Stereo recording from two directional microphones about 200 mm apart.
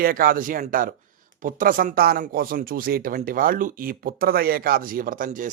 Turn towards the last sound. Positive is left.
turn(degrees=-40)  # may be behind; listen again after turning